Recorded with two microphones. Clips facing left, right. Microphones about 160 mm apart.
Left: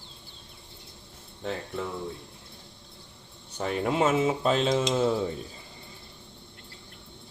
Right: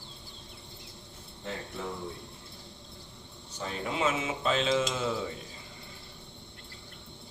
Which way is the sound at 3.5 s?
55° left (ahead or behind).